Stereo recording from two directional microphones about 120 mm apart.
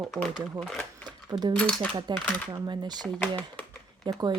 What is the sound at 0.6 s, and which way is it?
Speech, centre (ahead or behind).